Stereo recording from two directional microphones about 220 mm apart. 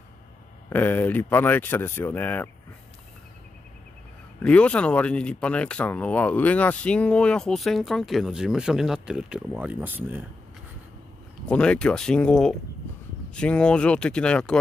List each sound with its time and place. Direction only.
0.7 s speech: 10° left (ahead or behind)
4.4 s speech: 5° left (ahead or behind)
11.4 s speech: 5° left (ahead or behind)